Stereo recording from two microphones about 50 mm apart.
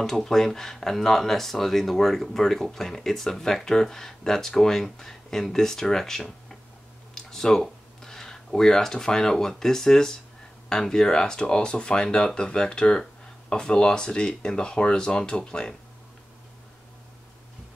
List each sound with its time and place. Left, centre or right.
0.0 s speech: centre